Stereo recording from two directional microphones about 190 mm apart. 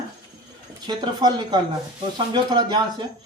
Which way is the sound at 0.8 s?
25° right (ahead or behind).